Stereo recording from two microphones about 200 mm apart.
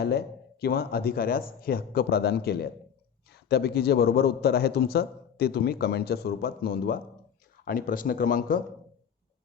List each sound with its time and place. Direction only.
0.6 s a man's voice: 50° left (ahead or behind)